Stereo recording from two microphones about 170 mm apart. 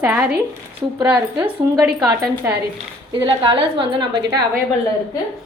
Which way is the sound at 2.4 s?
10° right (ahead or behind).